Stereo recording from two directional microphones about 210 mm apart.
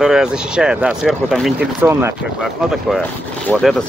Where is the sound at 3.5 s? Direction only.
Centre (ahead or behind).